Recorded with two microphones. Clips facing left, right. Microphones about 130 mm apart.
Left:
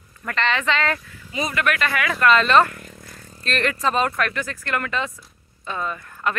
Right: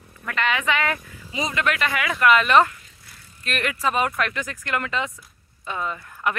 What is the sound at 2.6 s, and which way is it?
Vehicle, 55° left (ahead or behind).